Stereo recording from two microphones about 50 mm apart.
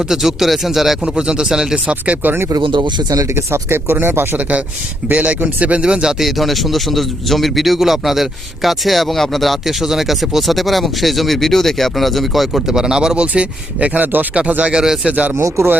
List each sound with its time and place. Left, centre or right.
0.0 s speech: centre
1.0 s speech: centre
2.2 s speech: right
4.4 s speech: right
5.8 s speech: centre
14.0 s speech: right
14.6 s speech: centre
15.1 s speech: right
15.4 s speech: right